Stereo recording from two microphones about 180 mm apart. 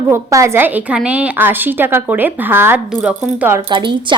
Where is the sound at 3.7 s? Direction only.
25° right (ahead or behind).